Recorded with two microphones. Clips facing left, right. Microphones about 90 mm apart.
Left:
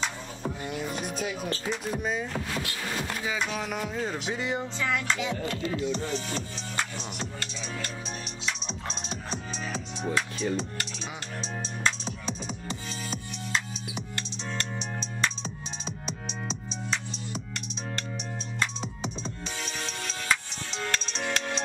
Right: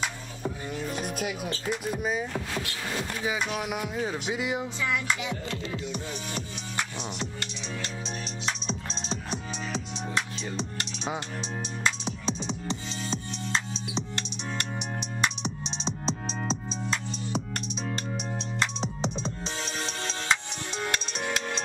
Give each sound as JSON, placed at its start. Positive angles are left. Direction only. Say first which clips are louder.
{"t": 0.7, "sound": "music", "louder": "left 2 dB", "side_deg": 10}
{"t": 1.0, "sound": "music", "louder": "even", "side_deg": -5}
{"t": 3.3, "sound": "music", "louder": "right 2 dB", "side_deg": -15}
{"t": 9.3, "sound": "music", "louder": "left 1 dB", "side_deg": -20}
{"t": 18.6, "sound": "music", "louder": "right 2 dB", "side_deg": -25}
{"t": 20.7, "sound": "music", "louder": "even", "side_deg": -10}